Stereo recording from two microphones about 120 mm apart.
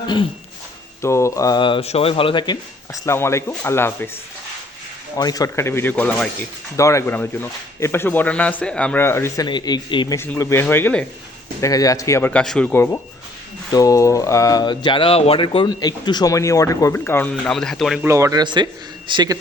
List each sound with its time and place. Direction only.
1.0 s speech: 25° left (ahead or behind)
1.6 s speech: 50° left (ahead or behind)
2.9 s speech: 20° left (ahead or behind)
5.1 s speech: 30° left (ahead or behind); by 6.1 s 15° left (ahead or behind)
6.7 s speech: 25° left (ahead or behind)
9.5 s speech: 35° left (ahead or behind)
10.2 s speech: 20° left (ahead or behind)
11.6 s speech: 30° left (ahead or behind)
12.3 s speech: 5° left (ahead or behind)
12.7 s speech: 20° left (ahead or behind)
13.7 s speech: 30° left (ahead or behind); by 15.7 s 45° left (ahead or behind)
15.7 s speech: 35° left (ahead or behind); by 18.0 s centre (ahead or behind)
18.0 s speech: 25° right (ahead or behind)
18.4 s speech: 40° right (ahead or behind)